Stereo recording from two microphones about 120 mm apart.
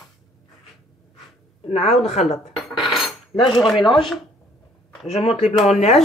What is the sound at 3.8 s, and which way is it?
Speech, 45° left (ahead or behind).